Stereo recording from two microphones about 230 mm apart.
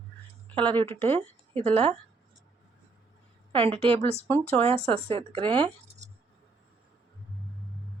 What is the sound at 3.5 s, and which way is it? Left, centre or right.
A woman's voice, right.